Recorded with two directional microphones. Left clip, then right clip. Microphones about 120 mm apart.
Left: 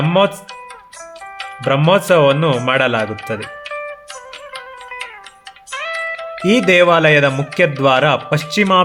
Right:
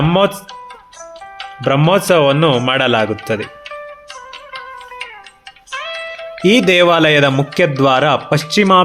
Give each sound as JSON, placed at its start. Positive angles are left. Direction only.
{"t": 0.0, "sound": "speech", "side_deg": -40}
{"t": 1.6, "sound": "speech", "side_deg": -40}
{"t": 3.4, "sound": "music", "side_deg": 35}
{"t": 5.7, "sound": "music", "side_deg": 35}
{"t": 6.4, "sound": "speech", "side_deg": -45}